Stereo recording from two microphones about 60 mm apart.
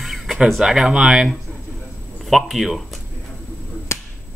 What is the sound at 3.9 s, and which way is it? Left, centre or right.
Whip, left.